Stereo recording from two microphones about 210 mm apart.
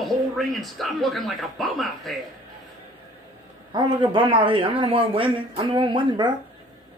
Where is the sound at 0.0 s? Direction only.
Centre (ahead or behind).